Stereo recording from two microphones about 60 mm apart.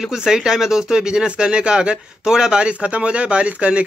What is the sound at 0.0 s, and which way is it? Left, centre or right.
Speech, centre.